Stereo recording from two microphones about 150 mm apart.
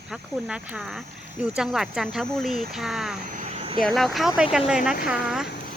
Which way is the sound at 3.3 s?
60° right (ahead or behind).